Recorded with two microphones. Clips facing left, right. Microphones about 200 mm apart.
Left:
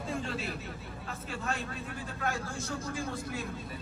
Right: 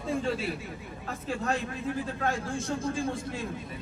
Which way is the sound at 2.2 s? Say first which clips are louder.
Right 3 dB; 30° right (ahead or behind).